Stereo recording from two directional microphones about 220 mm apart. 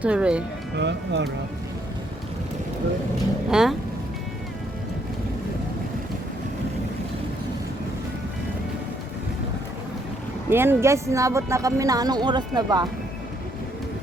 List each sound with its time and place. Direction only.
0.0 s speech: 5° right (ahead or behind)
0.8 s speech: 50° right (ahead or behind)
3.5 s speech: centre (ahead or behind)
10.5 s speech: 10° right (ahead or behind)